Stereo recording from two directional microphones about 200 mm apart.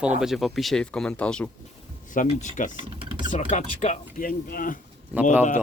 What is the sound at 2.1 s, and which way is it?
Speech, 40° left (ahead or behind).